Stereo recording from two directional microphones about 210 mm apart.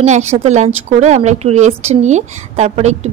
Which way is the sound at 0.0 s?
35° right (ahead or behind).